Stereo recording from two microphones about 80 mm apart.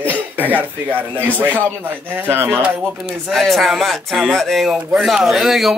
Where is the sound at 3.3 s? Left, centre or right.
Centre.